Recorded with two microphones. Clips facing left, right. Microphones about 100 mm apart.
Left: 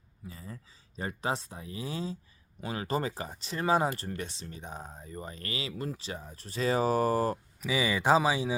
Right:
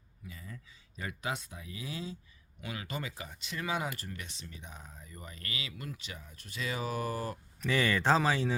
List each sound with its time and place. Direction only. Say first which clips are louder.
0.3 s speech: left 3 dB; 35° left (ahead or behind)
7.6 s speech: even; 10° left (ahead or behind)